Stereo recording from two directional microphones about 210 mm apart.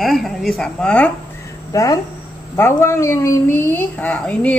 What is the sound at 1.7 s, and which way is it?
A woman's voice, 15° left (ahead or behind).